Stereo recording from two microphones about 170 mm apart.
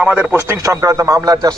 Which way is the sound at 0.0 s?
10° right (ahead or behind).